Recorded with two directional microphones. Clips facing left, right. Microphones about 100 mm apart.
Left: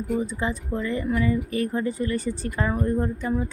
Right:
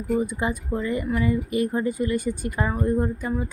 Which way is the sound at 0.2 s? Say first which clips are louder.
Right 2 dB; 15° right (ahead or behind).